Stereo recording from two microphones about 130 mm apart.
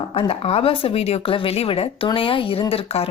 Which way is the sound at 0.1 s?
45° left (ahead or behind).